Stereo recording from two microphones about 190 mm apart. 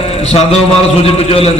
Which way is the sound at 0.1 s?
35° left (ahead or behind).